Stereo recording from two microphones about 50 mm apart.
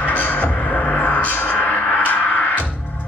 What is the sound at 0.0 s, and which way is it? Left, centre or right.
Music, left.